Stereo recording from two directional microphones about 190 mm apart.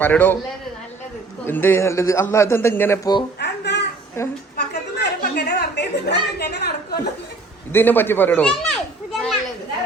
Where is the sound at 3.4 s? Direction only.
65° left (ahead or behind).